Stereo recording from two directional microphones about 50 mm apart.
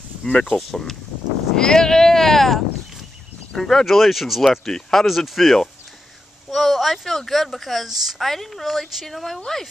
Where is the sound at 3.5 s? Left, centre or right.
Centre.